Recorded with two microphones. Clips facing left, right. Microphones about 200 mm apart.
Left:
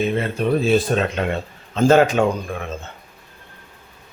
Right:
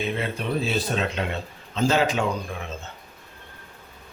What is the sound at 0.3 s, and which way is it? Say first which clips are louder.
Speech: left 8 dB; 50° left (ahead or behind).